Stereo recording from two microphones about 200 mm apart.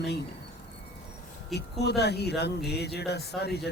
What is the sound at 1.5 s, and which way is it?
Speech, 55° left (ahead or behind).